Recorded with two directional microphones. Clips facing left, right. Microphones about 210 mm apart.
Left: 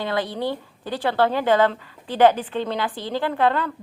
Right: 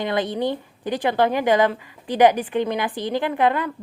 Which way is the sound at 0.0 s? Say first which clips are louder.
Right 2 dB; 20° right (ahead or behind).